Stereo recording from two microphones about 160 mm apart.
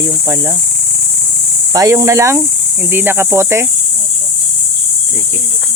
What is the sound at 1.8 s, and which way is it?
Speech, 20° right (ahead or behind).